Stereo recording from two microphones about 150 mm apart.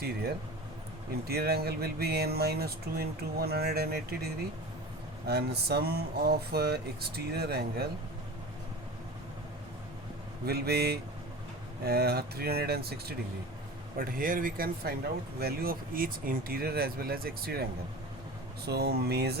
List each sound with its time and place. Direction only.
1.3 s speech: 90° right
10.4 s speech: 90° right
14.0 s speech: 70° right (ahead or behind); by 19.4 s 90° right